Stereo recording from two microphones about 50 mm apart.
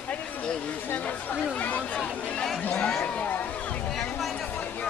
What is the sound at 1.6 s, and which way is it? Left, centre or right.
Speech, left.